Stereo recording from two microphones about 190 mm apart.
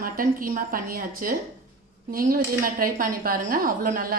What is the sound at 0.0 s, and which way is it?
A woman's voice, 50° right (ahead or behind).